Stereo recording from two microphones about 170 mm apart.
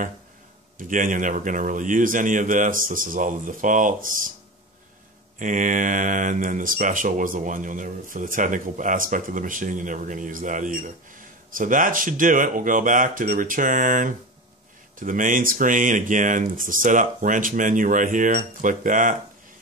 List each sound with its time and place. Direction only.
0.7 s speech: 50° right (ahead or behind)
5.4 s speech: 50° right (ahead or behind)